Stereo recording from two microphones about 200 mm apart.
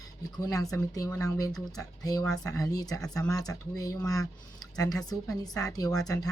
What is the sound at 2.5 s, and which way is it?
Speech, 15° left (ahead or behind).